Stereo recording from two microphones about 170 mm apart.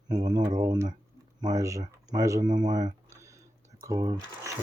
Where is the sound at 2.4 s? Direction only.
45° right (ahead or behind).